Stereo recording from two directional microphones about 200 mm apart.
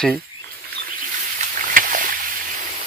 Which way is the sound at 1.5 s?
45° right (ahead or behind).